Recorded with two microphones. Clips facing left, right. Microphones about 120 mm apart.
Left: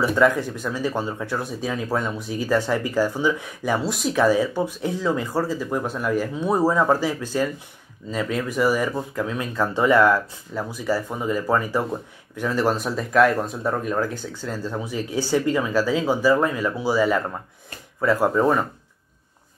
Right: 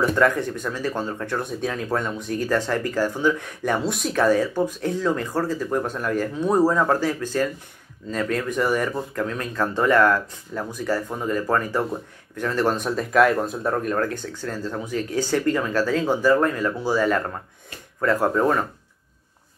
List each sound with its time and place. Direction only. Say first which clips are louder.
0.0 s speech: left 1 dB; 5° left (ahead or behind)